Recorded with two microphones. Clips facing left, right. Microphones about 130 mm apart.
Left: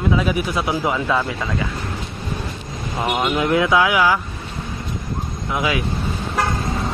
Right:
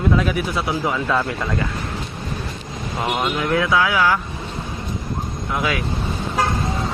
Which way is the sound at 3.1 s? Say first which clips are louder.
Left 2 dB; 10° left (ahead or behind).